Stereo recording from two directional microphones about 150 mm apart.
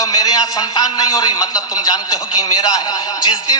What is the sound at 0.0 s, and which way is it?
A man's voice, 25° left (ahead or behind).